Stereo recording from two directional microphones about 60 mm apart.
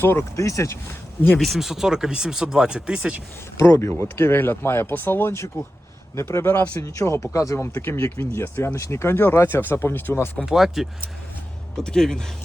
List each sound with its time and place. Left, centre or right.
0.0 s speech: left
0.3 s speech: left
1.4 s speech: centre
3.6 s speech: left
5.3 s speech: left
6.7 s speech: left
8.2 s speech: left
10.4 s speech: centre
11.8 s speech: centre